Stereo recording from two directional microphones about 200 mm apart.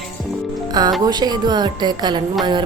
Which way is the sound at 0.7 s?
20° right (ahead or behind).